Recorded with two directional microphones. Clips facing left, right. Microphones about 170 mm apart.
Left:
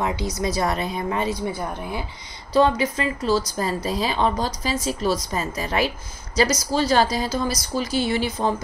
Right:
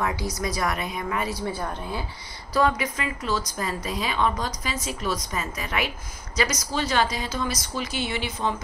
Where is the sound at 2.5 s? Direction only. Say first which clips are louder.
Left 5 dB; 30° left (ahead or behind).